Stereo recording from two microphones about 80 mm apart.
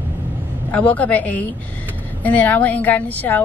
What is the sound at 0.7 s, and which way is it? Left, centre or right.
Speech, centre.